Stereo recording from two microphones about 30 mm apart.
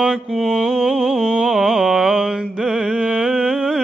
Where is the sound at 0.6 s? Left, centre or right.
Right.